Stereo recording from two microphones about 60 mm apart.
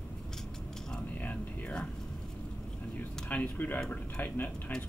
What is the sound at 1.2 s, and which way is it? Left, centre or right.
Speech, left.